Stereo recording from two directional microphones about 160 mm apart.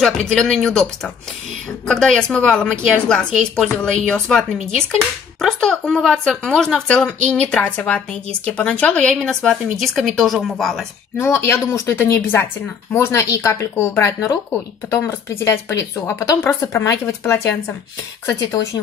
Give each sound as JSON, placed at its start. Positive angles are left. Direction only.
{"t": 0.0, "sound": "a woman's voice", "side_deg": 5}
{"t": 11.1, "sound": "speech", "side_deg": 15}